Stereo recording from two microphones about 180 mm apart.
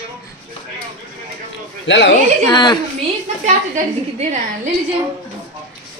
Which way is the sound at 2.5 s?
25° left (ahead or behind).